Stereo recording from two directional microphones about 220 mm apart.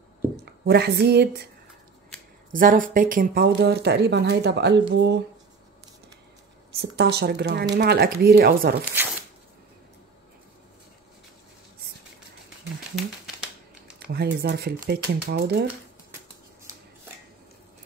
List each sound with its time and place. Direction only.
0.4 s speech: 50° right (ahead or behind)
2.5 s speech: 40° right (ahead or behind)
6.8 s speech: 50° right (ahead or behind)
13.9 s speech: 45° right (ahead or behind)